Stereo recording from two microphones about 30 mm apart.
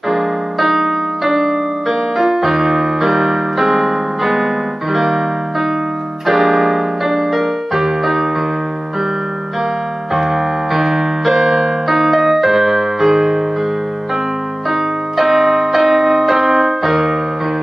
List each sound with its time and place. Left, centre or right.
0.1 s piano: centre
4.9 s music: centre
6.2 s keyboard: centre
10.1 s keyboard: centre
14.7 s music: centre